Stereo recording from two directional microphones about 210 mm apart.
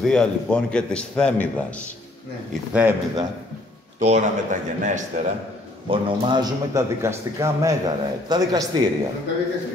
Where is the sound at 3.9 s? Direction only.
35° right (ahead or behind).